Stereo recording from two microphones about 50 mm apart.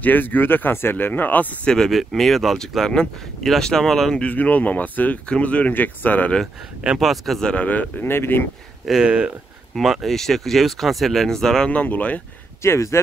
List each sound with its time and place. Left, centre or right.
0.0 s speech: left
1.9 s speech: centre
4.2 s speech: left
7.0 s speech: centre
7.5 s speech: left
8.0 s speech: left
9.0 s speech: centre
10.0 s speech: centre
11.7 s speech: left
12.6 s speech: left